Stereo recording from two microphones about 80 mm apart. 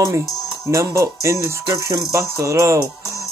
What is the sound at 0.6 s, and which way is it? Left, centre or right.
Music, right.